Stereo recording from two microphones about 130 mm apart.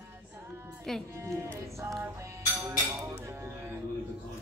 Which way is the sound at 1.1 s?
20° right (ahead or behind).